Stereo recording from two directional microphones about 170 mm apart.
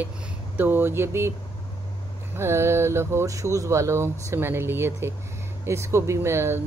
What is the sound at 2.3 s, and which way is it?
Speech, 15° right (ahead or behind).